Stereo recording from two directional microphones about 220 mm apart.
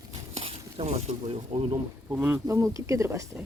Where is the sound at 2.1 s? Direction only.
5° right (ahead or behind).